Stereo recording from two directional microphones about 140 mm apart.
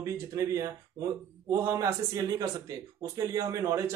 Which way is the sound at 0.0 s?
25° right (ahead or behind).